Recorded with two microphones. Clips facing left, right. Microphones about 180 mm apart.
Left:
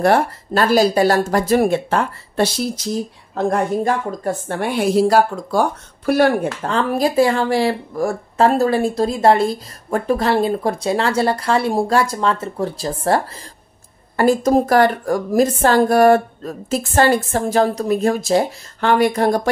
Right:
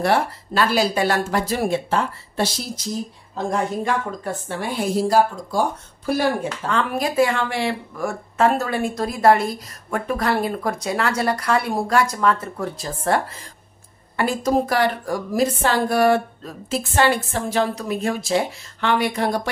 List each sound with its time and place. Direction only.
0.0 s a woman's voice: 45° left (ahead or behind)
3.8 s speech: 45° left (ahead or behind); by 6.7 s 60° left (ahead or behind)
6.7 s speech: 35° left (ahead or behind)
14.1 s a woman's voice: 45° left (ahead or behind)